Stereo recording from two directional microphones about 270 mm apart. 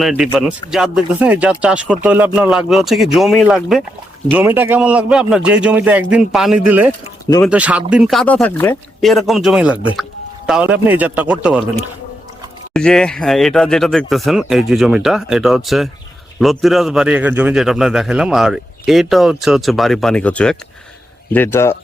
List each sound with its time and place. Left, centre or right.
0.0 s speech: centre
12.7 s speech: centre